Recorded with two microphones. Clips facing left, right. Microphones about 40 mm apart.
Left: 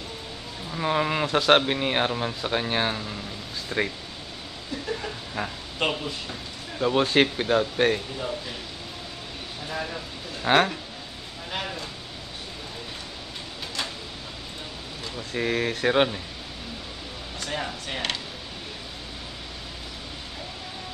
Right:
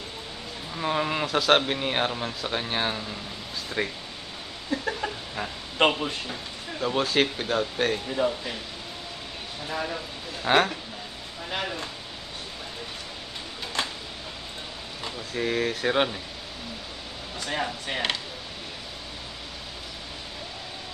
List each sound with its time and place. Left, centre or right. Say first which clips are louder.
0.7 s speech: left 2 dB; centre
4.7 s a sound: right 5 dB; right
5.4 s speech: left 2 dB; centre
5.8 s speech: right 5 dB; right
6.8 s speech: left 3 dB; centre
9.7 s speech: right 1 dB; centre
10.4 s speech: left 1 dB; centre
15.3 s speech: left 1 dB; centre
17.5 s speech: right 2 dB; centre